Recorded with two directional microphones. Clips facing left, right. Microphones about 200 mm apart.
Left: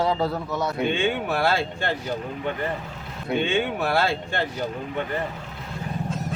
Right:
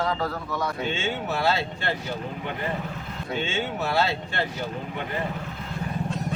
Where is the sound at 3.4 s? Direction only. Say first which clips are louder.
Left 5 dB; 60° left (ahead or behind).